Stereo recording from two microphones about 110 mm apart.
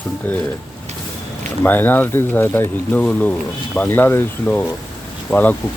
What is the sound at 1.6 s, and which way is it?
Speech, 15° left (ahead or behind).